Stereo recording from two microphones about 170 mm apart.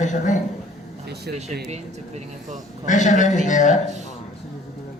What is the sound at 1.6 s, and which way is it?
Speech, 40° right (ahead or behind).